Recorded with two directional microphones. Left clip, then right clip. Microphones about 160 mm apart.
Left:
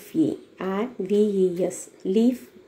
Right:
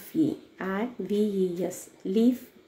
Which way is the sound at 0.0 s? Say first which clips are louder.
Left 3 dB; centre (ahead or behind).